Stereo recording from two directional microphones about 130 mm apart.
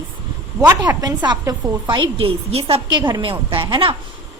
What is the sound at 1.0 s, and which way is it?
A woman's voice, 35° right (ahead or behind).